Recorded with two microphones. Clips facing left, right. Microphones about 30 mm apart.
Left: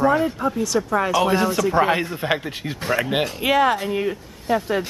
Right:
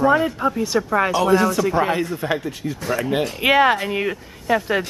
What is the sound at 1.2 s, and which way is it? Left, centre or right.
A man's voice, left.